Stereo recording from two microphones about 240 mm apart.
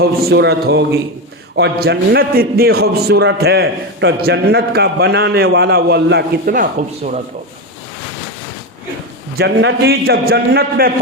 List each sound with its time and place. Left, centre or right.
0.0 s a man's voice: right
9.4 s a man's voice: right